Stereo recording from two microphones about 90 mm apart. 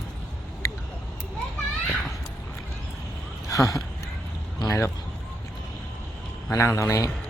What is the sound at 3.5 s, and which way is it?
A man's voice, 40° left (ahead or behind).